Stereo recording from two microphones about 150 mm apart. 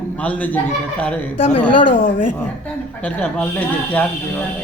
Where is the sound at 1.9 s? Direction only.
65° left (ahead or behind).